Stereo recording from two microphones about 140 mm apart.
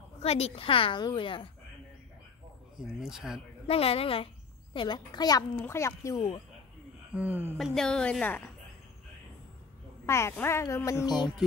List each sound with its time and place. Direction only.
0.2 s a woman's voice: 45° left (ahead or behind)
2.8 s a woman's voice: 5° right (ahead or behind)
3.6 s a woman's voice: 45° left (ahead or behind)
4.7 s a woman's voice: 30° left (ahead or behind)
5.6 s speech: 20° left (ahead or behind)
7.2 s speech: 15° right (ahead or behind)
7.5 s a woman's voice: centre (ahead or behind)
10.0 s speech: 20° left (ahead or behind)